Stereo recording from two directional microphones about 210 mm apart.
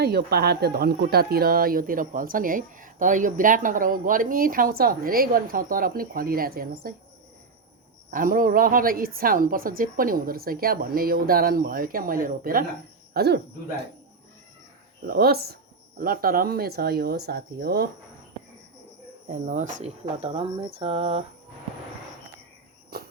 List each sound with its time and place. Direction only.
0.0 s speech: 50° right (ahead or behind)
8.1 s speech: 40° right (ahead or behind)
15.0 s speech: 45° right (ahead or behind)
19.3 s speech: 35° right (ahead or behind)